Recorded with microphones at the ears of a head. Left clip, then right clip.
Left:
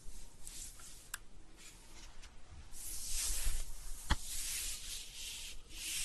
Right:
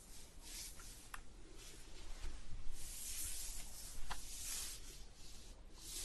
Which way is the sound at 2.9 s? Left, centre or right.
Left.